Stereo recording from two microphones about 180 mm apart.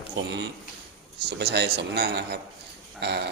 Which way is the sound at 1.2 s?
65° right (ahead or behind).